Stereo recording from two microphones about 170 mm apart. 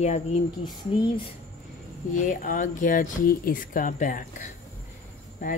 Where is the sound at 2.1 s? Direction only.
50° left (ahead or behind).